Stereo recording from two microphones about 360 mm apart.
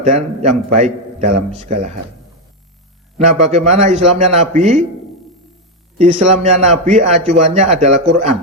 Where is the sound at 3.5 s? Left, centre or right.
Centre.